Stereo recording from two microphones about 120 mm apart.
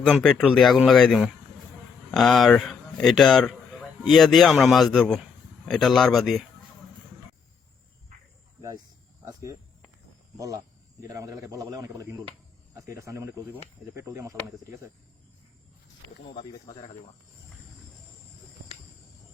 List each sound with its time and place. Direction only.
0.0 s a man's voice: 5° left (ahead or behind)
9.2 s a man's voice: 25° right (ahead or behind)